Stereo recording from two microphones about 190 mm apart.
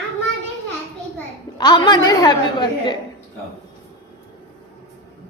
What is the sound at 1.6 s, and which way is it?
A woman's voice, 20° left (ahead or behind).